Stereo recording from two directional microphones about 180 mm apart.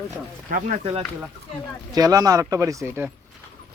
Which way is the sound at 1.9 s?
20° right (ahead or behind).